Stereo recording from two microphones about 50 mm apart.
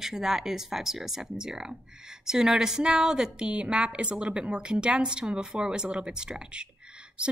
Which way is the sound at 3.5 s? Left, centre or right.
Right.